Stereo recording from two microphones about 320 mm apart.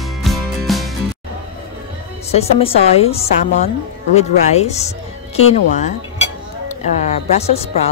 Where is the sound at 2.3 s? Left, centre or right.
Centre.